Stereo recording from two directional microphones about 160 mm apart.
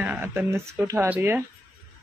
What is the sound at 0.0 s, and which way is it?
Speech, 15° right (ahead or behind).